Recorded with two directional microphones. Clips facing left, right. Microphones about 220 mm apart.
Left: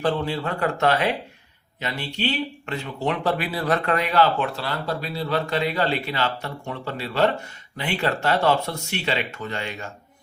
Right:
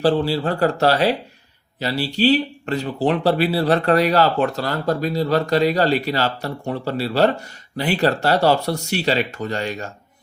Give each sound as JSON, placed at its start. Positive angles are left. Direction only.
{"t": 0.0, "sound": "speech", "side_deg": -30}